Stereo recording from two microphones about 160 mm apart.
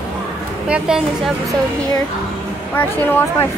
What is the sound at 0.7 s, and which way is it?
Speech, 5° right (ahead or behind).